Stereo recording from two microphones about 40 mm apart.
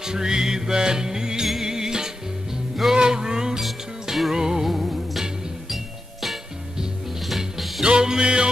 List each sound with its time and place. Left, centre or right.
0.0 s music: centre
3.0 s a sound: centre
3.6 s music: centre
4.3 s music: centre
7.2 s music: centre
7.8 s music: centre